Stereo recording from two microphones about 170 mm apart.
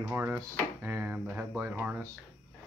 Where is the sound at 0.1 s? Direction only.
15° right (ahead or behind).